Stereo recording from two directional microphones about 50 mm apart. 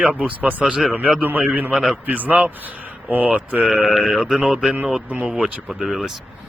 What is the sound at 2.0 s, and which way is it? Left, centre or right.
Speech, right.